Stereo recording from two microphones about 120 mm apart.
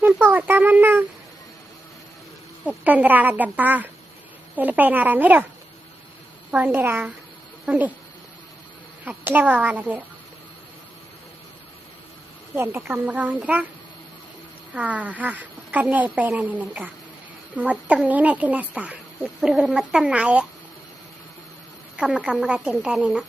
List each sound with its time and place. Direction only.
0.0 s speech: 15° right (ahead or behind)
2.6 s speech: 15° right (ahead or behind)
6.5 s speech: 15° right (ahead or behind)
9.0 s speech: 15° right (ahead or behind)
12.5 s speech: 15° right (ahead or behind)
14.7 s speech: 10° right (ahead or behind)
21.9 s speech: 10° right (ahead or behind)